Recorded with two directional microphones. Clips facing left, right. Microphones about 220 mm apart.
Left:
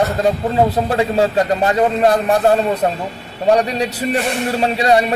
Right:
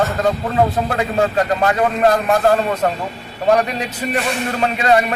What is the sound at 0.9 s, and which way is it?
Speech, 30° left (ahead or behind).